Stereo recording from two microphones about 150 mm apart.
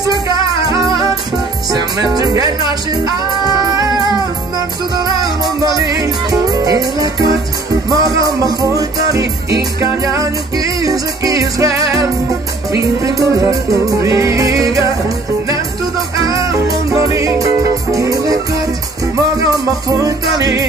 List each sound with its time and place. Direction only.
1.7 s music: 25° right (ahead or behind)
16.9 s music: 20° right (ahead or behind)